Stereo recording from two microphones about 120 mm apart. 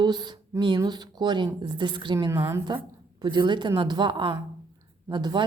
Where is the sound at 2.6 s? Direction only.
40° right (ahead or behind).